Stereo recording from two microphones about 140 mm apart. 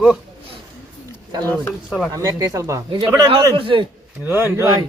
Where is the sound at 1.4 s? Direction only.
15° left (ahead or behind).